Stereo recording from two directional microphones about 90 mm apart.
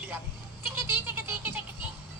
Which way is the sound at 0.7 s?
25° right (ahead or behind).